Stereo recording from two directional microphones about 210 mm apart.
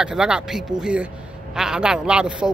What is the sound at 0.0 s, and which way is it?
A man's voice, 5° right (ahead or behind).